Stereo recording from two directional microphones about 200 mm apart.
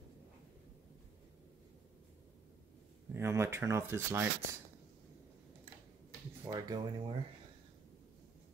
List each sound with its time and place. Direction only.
3.1 s speech: 15° right (ahead or behind)
6.5 s speech: 20° right (ahead or behind)